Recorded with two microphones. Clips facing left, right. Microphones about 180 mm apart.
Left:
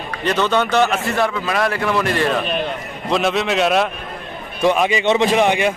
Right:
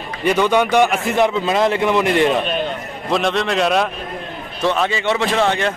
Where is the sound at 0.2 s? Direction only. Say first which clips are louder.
Right 3 dB; 10° right (ahead or behind).